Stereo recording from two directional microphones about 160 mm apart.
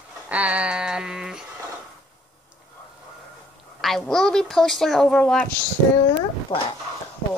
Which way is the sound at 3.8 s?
Centre (ahead or behind).